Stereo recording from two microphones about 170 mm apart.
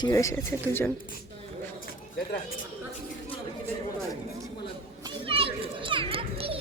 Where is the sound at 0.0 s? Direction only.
20° left (ahead or behind).